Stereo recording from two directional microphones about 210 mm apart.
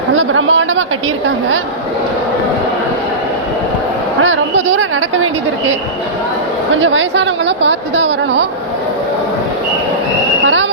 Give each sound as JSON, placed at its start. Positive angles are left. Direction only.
{"t": 0.2, "sound": "a woman's voice", "side_deg": -70}
{"t": 4.2, "sound": "a woman's voice", "side_deg": -70}
{"t": 6.8, "sound": "a woman's voice", "side_deg": -65}
{"t": 10.4, "sound": "a sound", "side_deg": -65}